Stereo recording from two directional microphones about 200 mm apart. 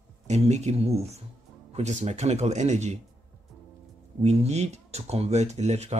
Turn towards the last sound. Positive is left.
turn(degrees=-35)  # may be behind; listen again after turning